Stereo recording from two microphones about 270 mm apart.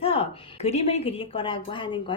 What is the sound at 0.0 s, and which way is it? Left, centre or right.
Speech, left.